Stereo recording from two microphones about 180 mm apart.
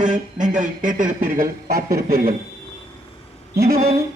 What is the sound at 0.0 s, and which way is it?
Speech, 45° right (ahead or behind).